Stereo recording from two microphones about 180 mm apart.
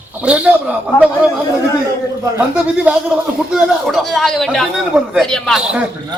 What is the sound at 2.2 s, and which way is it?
Speech, 10° right (ahead or behind).